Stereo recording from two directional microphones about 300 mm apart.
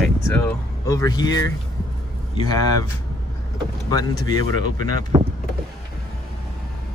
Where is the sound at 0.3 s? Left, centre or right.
Centre.